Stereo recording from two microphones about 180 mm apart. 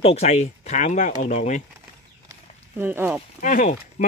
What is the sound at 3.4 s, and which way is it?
Speech, 45° left (ahead or behind).